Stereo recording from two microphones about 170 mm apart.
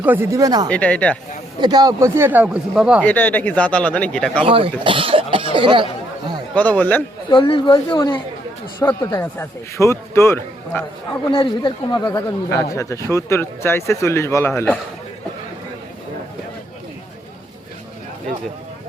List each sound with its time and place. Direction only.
0.0 s speech: 10° right (ahead or behind)
0.7 s speech: 10° left (ahead or behind)
1.5 s speech: 25° right (ahead or behind); by 3.0 s 5° right (ahead or behind)
3.0 s speech: 10° left (ahead or behind)
4.4 s speech: 30° right (ahead or behind)
6.5 s speech: 10° left (ahead or behind)
7.3 s speech: 30° left (ahead or behind)
8.8 s speech: 15° left (ahead or behind)
11.6 s speech: 25° left (ahead or behind)